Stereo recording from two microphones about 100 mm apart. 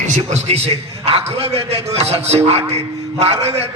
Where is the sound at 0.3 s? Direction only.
90° right.